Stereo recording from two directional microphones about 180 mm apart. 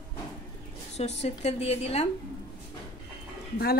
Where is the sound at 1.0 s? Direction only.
35° left (ahead or behind).